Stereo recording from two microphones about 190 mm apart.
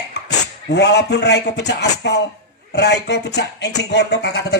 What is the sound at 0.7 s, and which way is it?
A man's voice, 60° left (ahead or behind).